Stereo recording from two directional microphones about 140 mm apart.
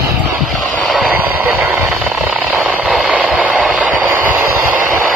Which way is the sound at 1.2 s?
15° right (ahead or behind).